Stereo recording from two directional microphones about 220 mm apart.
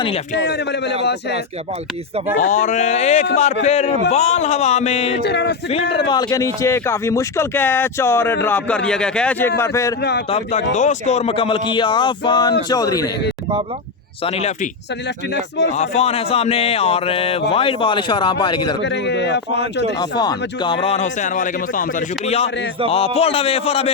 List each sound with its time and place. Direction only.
0.3 s speech: 50° left (ahead or behind)
2.4 s speech: 35° left (ahead or behind)
5.2 s speech: 50° left (ahead or behind)
6.1 s speech: 15° left (ahead or behind)
10.0 s speech: 50° left (ahead or behind)
10.2 s speech: 30° left (ahead or behind)
14.3 s speech: 30° left (ahead or behind)
15.7 s speech: 30° left (ahead or behind)
18.8 s speech: 50° left (ahead or behind)
20.0 s speech: 20° left (ahead or behind)